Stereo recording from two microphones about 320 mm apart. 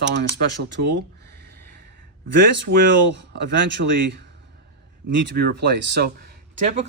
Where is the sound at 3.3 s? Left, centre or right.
Right.